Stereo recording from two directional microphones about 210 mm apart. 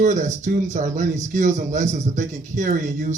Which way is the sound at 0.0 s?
35° right (ahead or behind).